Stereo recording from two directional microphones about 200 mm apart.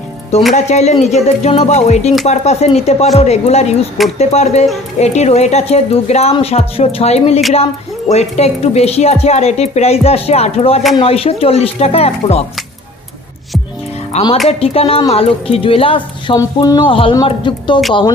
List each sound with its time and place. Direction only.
0.6 s a woman's voice: 35° left (ahead or behind)
14.1 s a woman's voice: 30° left (ahead or behind)